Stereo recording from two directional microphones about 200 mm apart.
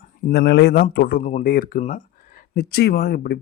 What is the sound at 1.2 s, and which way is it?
Speech, 35° left (ahead or behind).